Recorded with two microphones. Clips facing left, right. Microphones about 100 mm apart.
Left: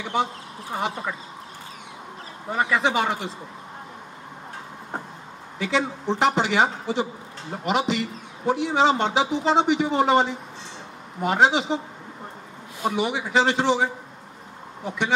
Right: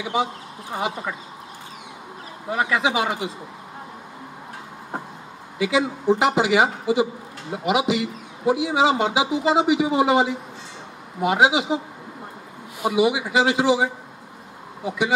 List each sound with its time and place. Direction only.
0.0 s a man's voice: 5° right (ahead or behind)
2.5 s speech: 5° right (ahead or behind)
5.6 s a man's voice: 5° right (ahead or behind)
12.8 s a man's voice: 5° right (ahead or behind)
14.9 s speech: 5° right (ahead or behind)